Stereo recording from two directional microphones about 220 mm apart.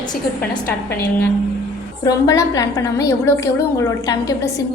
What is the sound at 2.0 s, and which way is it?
A woman's voice, 15° left (ahead or behind).